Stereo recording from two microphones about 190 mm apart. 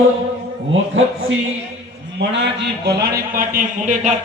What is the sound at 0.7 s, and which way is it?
Speech, 90° right.